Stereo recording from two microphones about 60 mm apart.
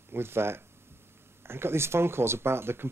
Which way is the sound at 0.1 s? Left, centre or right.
Right.